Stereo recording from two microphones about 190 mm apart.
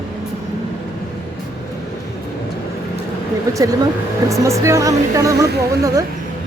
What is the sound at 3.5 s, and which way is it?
A woman's voice, 15° right (ahead or behind).